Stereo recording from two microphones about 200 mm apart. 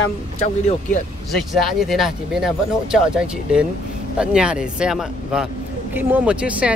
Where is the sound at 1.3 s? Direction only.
Centre (ahead or behind).